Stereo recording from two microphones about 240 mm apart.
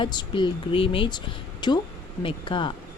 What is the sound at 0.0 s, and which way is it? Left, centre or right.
A woman's voice, centre.